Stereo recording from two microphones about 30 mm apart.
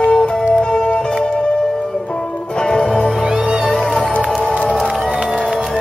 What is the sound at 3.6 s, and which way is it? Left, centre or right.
Music, centre.